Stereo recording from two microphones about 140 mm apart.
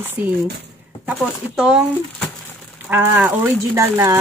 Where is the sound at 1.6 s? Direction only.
5° right (ahead or behind).